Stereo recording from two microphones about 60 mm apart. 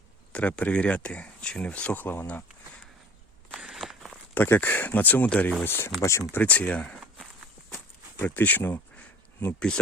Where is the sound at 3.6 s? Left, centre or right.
Centre.